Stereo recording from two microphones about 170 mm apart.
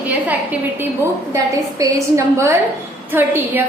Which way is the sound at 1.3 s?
20° right (ahead or behind).